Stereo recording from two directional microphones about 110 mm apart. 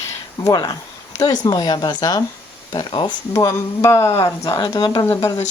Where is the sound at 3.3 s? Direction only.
25° left (ahead or behind).